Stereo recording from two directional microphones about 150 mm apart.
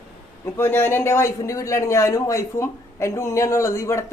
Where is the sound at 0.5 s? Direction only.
15° left (ahead or behind).